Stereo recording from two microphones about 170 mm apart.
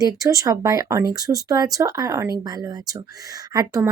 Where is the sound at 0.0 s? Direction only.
20° right (ahead or behind).